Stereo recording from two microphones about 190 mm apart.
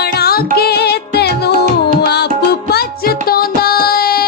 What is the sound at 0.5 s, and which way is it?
Music, 55° left (ahead or behind).